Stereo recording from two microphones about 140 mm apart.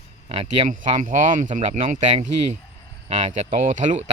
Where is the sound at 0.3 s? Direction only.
45° right (ahead or behind).